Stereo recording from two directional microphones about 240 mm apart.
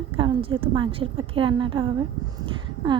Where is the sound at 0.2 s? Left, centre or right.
Right.